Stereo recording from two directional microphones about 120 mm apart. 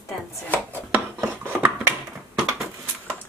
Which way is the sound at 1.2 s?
20° right (ahead or behind).